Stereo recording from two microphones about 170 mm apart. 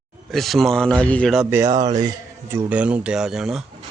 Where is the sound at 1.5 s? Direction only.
15° right (ahead or behind).